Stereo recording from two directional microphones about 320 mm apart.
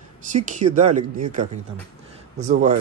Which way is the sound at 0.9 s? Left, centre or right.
Right.